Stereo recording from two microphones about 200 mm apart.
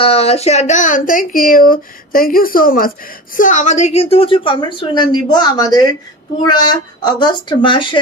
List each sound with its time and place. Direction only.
0.0 s a woman's voice: 30° left (ahead or behind)